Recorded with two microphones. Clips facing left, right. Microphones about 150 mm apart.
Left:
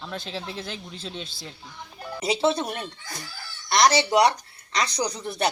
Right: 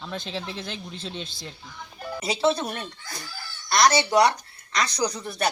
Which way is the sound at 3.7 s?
15° left (ahead or behind).